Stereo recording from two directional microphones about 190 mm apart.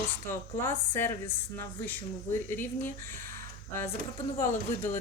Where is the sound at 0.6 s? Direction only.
10° left (ahead or behind).